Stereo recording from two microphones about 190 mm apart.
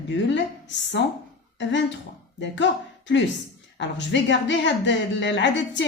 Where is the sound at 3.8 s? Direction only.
70° left (ahead or behind).